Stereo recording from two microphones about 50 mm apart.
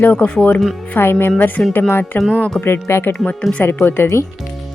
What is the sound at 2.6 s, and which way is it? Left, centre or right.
Speech, left.